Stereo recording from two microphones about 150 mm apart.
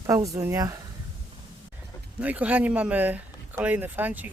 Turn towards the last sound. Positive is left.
turn(degrees=-10)  # may be behind; listen again after turning